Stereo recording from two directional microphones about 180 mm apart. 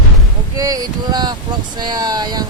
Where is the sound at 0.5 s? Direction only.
20° right (ahead or behind).